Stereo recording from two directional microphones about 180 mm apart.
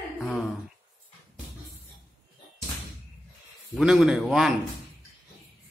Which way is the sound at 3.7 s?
Centre (ahead or behind).